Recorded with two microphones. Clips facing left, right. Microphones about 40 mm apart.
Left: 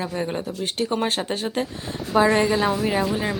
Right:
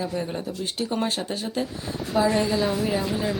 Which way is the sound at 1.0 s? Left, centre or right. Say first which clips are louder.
Left 3 dB; left.